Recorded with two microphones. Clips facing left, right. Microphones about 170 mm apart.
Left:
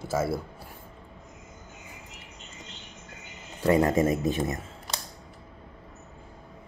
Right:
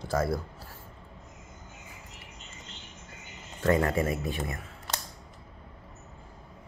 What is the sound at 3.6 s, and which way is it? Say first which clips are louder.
Speech: left 4 dB; 15° left (ahead or behind).